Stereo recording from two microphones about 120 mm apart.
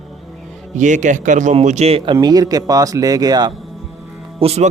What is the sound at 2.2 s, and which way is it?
Speech, 30° right (ahead or behind).